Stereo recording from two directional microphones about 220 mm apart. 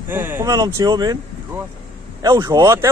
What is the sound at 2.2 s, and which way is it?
Speech, 20° right (ahead or behind).